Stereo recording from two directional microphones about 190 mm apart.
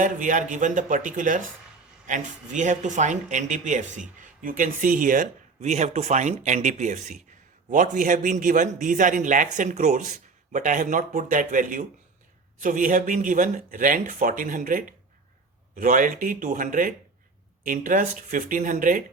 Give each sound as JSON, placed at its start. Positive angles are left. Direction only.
{"t": 0.0, "sound": "a man's voice", "side_deg": -45}